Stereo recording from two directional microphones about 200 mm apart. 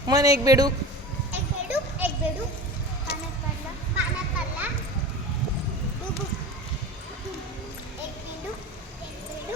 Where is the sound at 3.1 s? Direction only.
55° left (ahead or behind).